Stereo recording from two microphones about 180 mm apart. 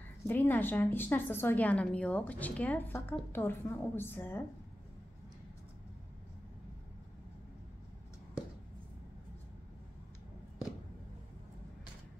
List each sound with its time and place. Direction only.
0.3 s a woman's voice: 10° left (ahead or behind)